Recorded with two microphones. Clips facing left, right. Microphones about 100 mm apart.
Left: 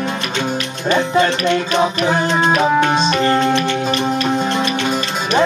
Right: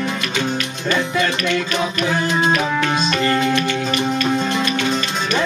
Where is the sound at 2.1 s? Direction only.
25° left (ahead or behind).